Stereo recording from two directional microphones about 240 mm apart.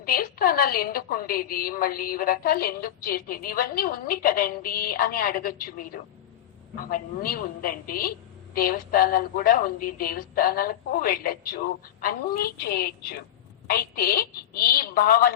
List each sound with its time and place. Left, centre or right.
0.0 s a woman's voice: left